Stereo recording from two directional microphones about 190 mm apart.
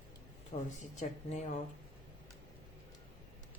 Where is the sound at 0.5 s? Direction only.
40° left (ahead or behind).